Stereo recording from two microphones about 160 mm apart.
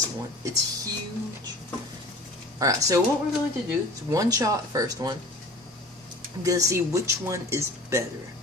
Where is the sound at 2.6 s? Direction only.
20° right (ahead or behind).